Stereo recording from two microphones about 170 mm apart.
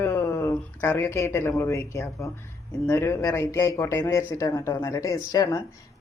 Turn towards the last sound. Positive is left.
turn(degrees=20)  # may be behind; listen again after turning